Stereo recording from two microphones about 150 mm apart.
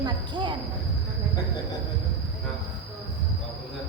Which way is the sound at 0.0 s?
30° right (ahead or behind).